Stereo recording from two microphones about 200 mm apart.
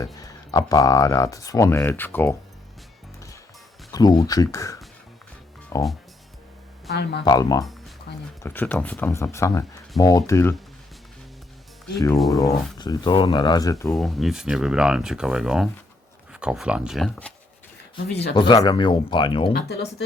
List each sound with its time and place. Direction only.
0.0 s speech: 15° left (ahead or behind)
3.9 s speech: 20° left (ahead or behind)
6.9 s speech: 55° left (ahead or behind)
7.3 s speech: 20° left (ahead or behind)
7.6 s music: centre (ahead or behind)
8.4 s speech: 10° left (ahead or behind)
11.9 s speech: 15° left (ahead or behind)
13.9 s speech: centre (ahead or behind)
18.1 s speech: 55° left (ahead or behind)
18.3 s speech: 25° left (ahead or behind)
19.6 s speech: 55° left (ahead or behind)